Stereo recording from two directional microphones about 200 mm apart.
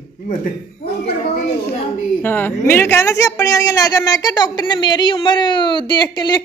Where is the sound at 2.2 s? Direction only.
10° left (ahead or behind).